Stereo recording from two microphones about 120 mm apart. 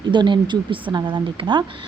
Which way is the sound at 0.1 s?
40° right (ahead or behind).